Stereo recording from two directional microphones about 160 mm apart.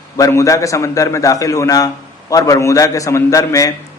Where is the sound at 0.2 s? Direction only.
20° left (ahead or behind).